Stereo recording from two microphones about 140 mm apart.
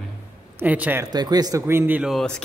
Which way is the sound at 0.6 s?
10° right (ahead or behind).